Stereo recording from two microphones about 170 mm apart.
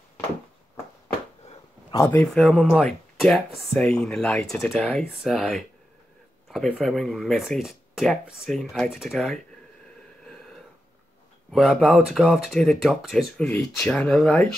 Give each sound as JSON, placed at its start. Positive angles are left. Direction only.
{"t": 1.5, "sound": "a sound", "side_deg": 25}
{"t": 2.2, "sound": "speech", "side_deg": 0}
{"t": 11.5, "sound": "speech", "side_deg": 0}